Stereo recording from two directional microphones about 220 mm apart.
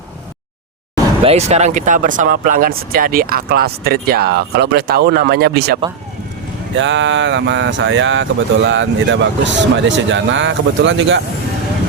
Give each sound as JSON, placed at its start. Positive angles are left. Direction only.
{"t": 1.2, "sound": "speech", "side_deg": -30}